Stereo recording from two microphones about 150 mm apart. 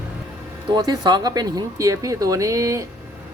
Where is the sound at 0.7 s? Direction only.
25° right (ahead or behind).